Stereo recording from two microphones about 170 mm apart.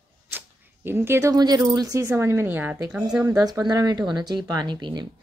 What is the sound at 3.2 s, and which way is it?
Speech, 20° right (ahead or behind).